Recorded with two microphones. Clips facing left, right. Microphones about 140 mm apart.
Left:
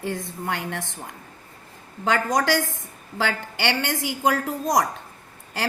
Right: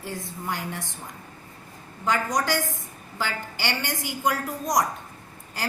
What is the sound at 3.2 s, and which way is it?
Speech, 90° left.